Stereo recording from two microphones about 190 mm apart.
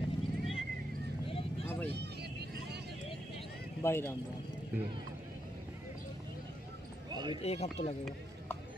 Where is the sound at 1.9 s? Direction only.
60° right (ahead or behind).